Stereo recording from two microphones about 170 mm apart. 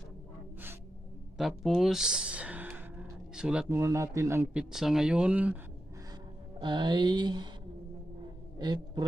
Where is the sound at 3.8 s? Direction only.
15° right (ahead or behind).